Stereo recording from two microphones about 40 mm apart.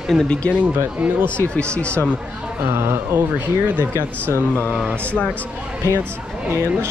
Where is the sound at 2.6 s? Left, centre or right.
Right.